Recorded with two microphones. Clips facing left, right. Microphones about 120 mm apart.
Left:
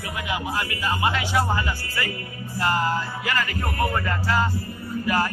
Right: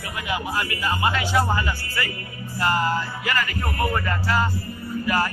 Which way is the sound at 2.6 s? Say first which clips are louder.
Right 1 dB; 20° left (ahead or behind).